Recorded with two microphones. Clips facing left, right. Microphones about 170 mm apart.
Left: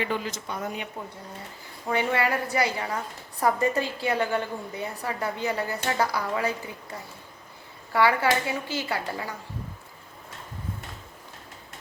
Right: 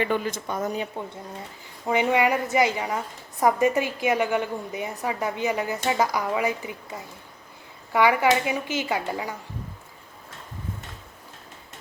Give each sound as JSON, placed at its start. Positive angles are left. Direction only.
{"t": 0.0, "sound": "speech", "side_deg": -50}
{"t": 1.9, "sound": "a woman's voice", "side_deg": -15}
{"t": 7.9, "sound": "a woman's voice", "side_deg": -15}